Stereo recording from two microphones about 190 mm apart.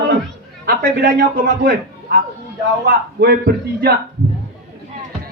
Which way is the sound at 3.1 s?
60° right (ahead or behind).